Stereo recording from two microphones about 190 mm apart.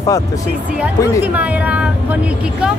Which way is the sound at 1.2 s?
5° right (ahead or behind).